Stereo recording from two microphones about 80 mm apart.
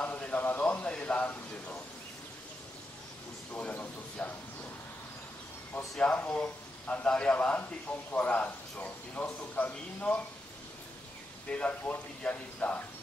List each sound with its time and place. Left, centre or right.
0.0 s a sound: centre
3.5 s a man's voice: centre
5.9 s a man's voice: centre
11.4 s speech: centre